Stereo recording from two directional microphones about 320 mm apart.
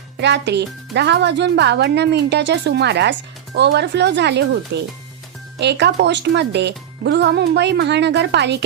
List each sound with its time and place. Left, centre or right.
0.2 s speech: right